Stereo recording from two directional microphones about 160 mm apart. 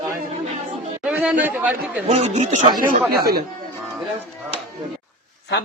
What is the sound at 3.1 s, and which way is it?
Speech, 75° right (ahead or behind).